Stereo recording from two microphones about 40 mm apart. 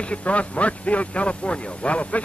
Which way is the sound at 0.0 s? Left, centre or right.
Left.